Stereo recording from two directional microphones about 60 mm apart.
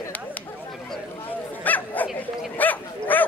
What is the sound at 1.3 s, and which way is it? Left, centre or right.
Speech, left.